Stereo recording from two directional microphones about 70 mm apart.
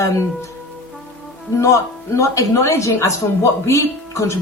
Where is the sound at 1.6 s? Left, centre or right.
Left.